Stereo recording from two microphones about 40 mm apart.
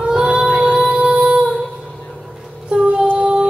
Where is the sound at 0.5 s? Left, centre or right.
Right.